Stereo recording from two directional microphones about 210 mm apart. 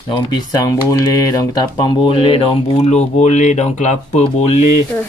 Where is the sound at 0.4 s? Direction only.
15° left (ahead or behind); by 4.2 s 35° left (ahead or behind).